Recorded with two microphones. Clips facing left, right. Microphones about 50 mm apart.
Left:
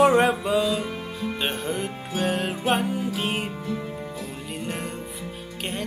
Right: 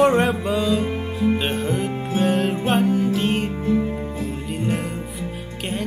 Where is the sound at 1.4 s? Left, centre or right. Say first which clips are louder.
Right 4 dB; centre.